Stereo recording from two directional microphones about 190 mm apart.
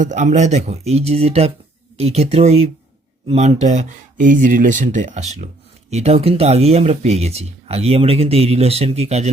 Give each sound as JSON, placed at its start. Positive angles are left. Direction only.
{"t": 0.0, "sound": "speech", "side_deg": -40}